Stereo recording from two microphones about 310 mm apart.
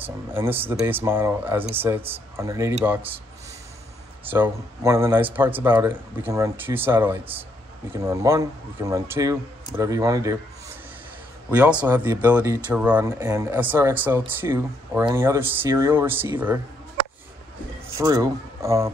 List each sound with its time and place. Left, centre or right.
0.0 s speech: centre
4.3 s speech: centre
11.5 s speech: centre
17.9 s speech: centre